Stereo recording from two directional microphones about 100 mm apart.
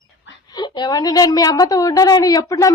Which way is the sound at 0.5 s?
45° left (ahead or behind).